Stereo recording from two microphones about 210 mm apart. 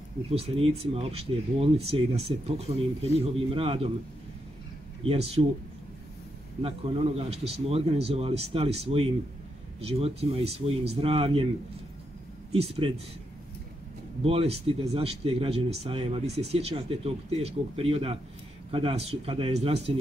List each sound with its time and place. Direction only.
0.3 s speech: 25° right (ahead or behind)
5.4 s speech: 25° right (ahead or behind)
6.6 s speech: 25° right (ahead or behind)
12.5 s speech: 25° right (ahead or behind)
14.2 s speech: 30° right (ahead or behind)